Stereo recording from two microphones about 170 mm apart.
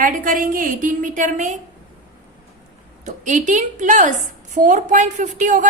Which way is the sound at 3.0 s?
45° right (ahead or behind).